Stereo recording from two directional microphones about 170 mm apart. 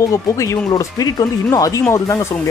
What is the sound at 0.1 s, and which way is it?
Speech, 20° left (ahead or behind).